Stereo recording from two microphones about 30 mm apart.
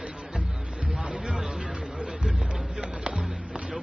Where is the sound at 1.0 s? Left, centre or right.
Right.